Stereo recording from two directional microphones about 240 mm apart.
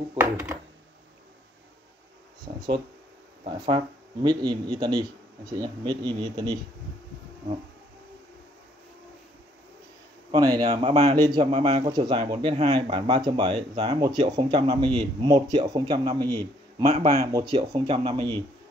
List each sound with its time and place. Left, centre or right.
0.2 s speech: centre
2.4 s speech: centre
10.3 s speech: centre
11.5 s speech: right